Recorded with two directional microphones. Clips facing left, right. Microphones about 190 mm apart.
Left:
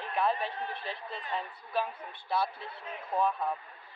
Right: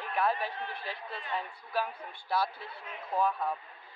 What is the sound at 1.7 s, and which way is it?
Speech, centre (ahead or behind).